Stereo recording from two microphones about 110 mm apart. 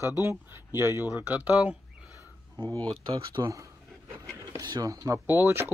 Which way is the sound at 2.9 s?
45° right (ahead or behind).